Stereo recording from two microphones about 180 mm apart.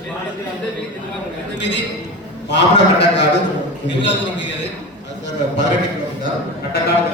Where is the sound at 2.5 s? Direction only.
75° left (ahead or behind).